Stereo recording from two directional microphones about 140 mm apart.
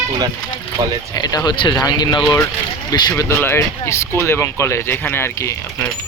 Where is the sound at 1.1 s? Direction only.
25° left (ahead or behind).